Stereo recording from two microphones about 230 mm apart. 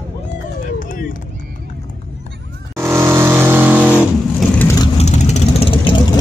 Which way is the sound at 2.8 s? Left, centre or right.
Centre.